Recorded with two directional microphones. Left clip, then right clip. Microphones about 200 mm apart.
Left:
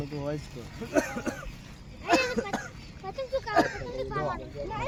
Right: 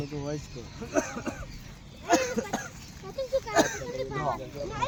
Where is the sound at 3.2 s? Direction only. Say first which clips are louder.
Right 2 dB; 25° left (ahead or behind).